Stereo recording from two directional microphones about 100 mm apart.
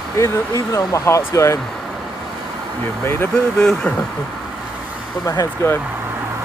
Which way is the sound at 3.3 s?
5° left (ahead or behind).